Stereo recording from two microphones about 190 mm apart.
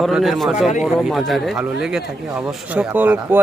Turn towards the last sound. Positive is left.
turn(degrees=-10)  # may be behind; listen again after turning